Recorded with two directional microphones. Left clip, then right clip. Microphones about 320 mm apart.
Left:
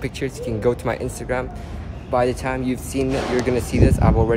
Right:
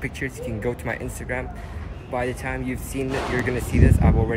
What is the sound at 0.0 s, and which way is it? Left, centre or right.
Speech, centre.